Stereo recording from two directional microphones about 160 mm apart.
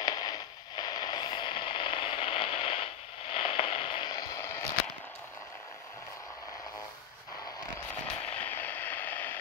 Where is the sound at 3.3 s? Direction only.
35° left (ahead or behind); by 4.6 s 20° left (ahead or behind).